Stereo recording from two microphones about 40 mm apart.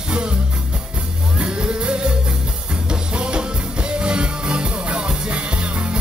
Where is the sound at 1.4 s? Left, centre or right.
Right.